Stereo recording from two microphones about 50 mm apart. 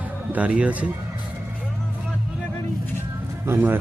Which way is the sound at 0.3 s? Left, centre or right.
Right.